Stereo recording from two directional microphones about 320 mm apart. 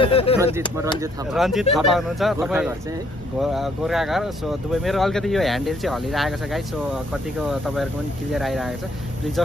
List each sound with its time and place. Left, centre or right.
0.0 s speech: centre
1.3 s speech: centre